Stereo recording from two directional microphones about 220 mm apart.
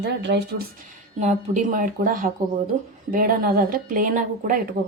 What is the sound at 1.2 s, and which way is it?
A woman's voice, 35° right (ahead or behind).